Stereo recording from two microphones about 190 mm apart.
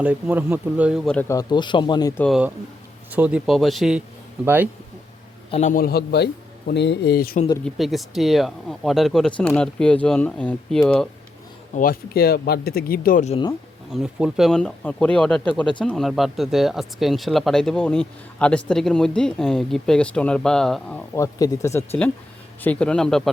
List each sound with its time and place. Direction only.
0.0 s speech: 10° right (ahead or behind)
1.3 s speech: 20° left (ahead or behind)
2.2 s speech: centre (ahead or behind)
5.5 s speech: 35° left (ahead or behind); by 7.3 s 55° left (ahead or behind)
7.6 s speech: centre (ahead or behind)
11.7 s speech: 45° left (ahead or behind)
13.9 s speech: 5° right (ahead or behind)
21.2 s speech: 20° left (ahead or behind); by 23.3 s 5° left (ahead or behind)